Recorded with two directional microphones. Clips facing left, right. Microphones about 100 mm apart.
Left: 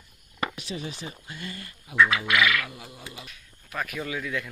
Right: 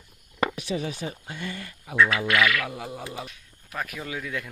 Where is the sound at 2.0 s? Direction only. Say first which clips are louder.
Even; 15° left (ahead or behind).